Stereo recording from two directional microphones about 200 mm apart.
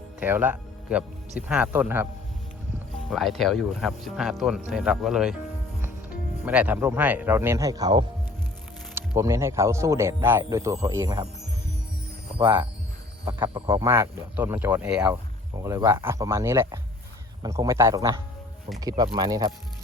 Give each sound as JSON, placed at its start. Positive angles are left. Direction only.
{"t": 0.2, "sound": "speech", "side_deg": -10}
{"t": 6.4, "sound": "speech", "side_deg": -5}
{"t": 13.2, "sound": "speech", "side_deg": -25}